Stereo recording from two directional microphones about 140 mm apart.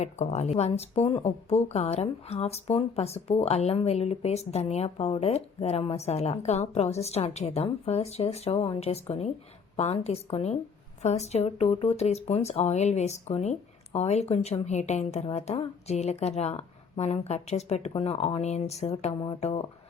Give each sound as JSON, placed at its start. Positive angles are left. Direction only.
{"t": 0.0, "sound": "speech", "side_deg": 55}